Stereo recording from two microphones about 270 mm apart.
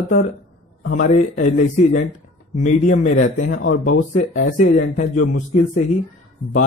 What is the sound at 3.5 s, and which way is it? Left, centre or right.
Speech, left.